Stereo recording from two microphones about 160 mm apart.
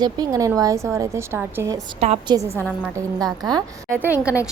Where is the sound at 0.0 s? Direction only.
25° right (ahead or behind).